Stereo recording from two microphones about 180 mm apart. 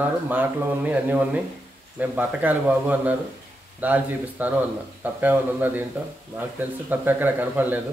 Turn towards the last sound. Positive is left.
turn(degrees=-10)  # may be behind; listen again after turning